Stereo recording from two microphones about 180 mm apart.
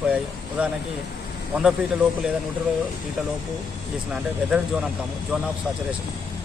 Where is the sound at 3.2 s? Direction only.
5° right (ahead or behind).